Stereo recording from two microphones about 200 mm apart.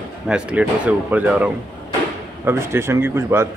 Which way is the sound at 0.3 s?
5° right (ahead or behind).